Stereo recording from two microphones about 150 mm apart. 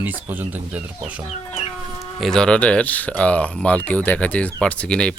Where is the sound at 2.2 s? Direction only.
5° left (ahead or behind).